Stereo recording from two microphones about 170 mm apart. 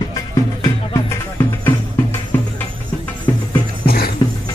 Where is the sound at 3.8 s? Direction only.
65° left (ahead or behind).